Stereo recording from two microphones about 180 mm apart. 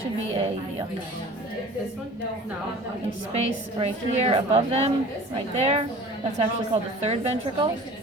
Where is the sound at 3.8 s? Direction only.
35° right (ahead or behind).